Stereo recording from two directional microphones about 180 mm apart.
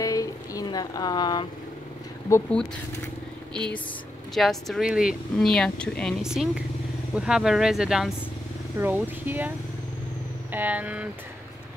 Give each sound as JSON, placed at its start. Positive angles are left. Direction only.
{"t": 0.0, "sound": "a sound", "side_deg": 20}
{"t": 2.2, "sound": "speech", "side_deg": 15}
{"t": 4.3, "sound": "speech", "side_deg": 0}
{"t": 10.5, "sound": "speech", "side_deg": -10}